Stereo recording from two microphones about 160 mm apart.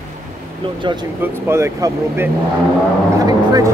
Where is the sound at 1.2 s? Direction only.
15° right (ahead or behind).